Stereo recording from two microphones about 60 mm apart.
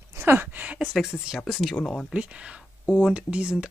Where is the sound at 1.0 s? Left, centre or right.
Centre.